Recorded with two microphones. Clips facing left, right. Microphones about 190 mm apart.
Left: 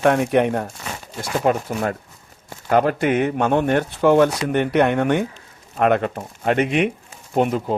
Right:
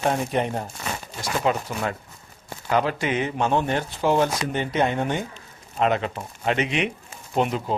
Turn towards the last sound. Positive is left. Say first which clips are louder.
# left 4 dB
turn(degrees=50)  # may be behind; listen again after turning